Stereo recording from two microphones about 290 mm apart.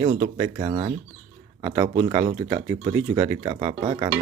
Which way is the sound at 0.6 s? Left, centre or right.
Centre.